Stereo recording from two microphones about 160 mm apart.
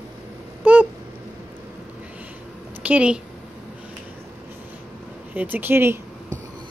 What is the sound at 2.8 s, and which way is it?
Speech, 10° right (ahead or behind).